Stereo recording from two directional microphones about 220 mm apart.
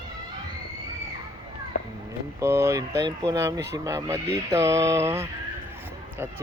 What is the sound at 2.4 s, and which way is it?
Speech, 10° right (ahead or behind).